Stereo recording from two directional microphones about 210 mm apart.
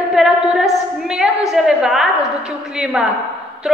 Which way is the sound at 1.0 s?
5° right (ahead or behind).